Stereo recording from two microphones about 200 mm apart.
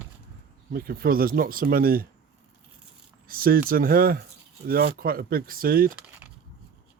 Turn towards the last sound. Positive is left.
turn(degrees=-5)  # may be behind; listen again after turning